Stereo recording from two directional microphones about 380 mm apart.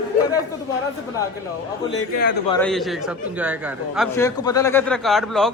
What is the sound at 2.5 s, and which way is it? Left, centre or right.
A man's voice, centre.